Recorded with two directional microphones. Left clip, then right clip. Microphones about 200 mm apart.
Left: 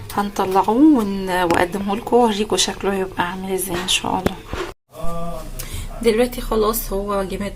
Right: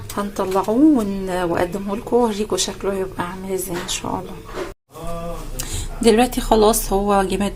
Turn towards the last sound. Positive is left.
turn(degrees=-35)  # may be behind; listen again after turning